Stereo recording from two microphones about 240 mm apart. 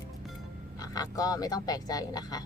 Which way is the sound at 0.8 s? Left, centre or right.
Centre.